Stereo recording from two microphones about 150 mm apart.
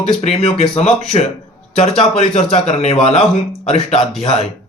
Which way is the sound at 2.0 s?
40° left (ahead or behind).